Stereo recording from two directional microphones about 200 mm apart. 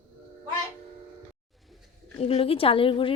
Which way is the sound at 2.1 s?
30° left (ahead or behind).